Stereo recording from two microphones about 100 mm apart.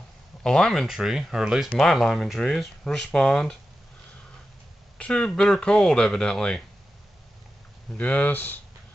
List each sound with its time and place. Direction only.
0.4 s speech: 5° left (ahead or behind)
1.8 s speech: 5° left (ahead or behind)
4.9 s speech: 10° left (ahead or behind)
8.0 s speech: 15° left (ahead or behind)